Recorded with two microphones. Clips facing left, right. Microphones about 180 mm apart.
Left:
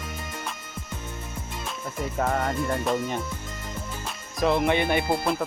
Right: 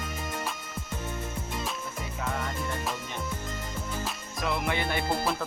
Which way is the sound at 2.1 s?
50° left (ahead or behind).